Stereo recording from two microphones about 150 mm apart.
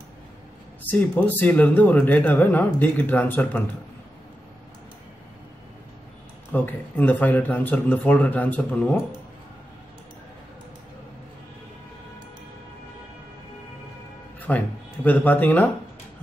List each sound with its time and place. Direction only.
0.8 s speech: 10° left (ahead or behind)
6.5 s speech: 10° left (ahead or behind)
14.5 s speech: 15° left (ahead or behind)